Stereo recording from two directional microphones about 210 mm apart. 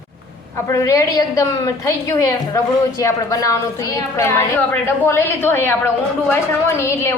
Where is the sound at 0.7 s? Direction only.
15° left (ahead or behind).